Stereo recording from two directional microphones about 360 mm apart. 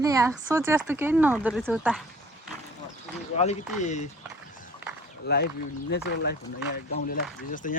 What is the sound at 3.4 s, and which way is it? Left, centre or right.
Speech, centre.